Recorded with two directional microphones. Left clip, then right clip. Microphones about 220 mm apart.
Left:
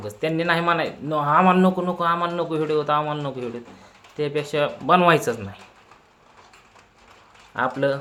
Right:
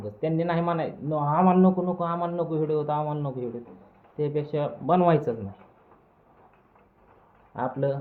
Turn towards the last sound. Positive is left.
turn(degrees=5)  # may be behind; listen again after turning